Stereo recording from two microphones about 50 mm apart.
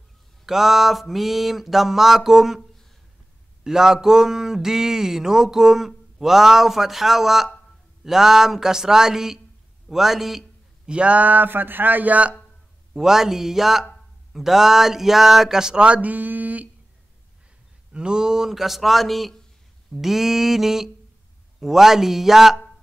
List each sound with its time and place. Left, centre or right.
0.5 s mantra: centre
3.6 s speech: centre
10.9 s a man's voice: right
12.9 s speech: centre; by 16.6 s right
17.9 s mantra: centre
19.9 s speech: centre